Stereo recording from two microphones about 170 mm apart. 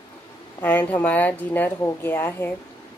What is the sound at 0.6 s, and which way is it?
A woman's voice, 10° left (ahead or behind).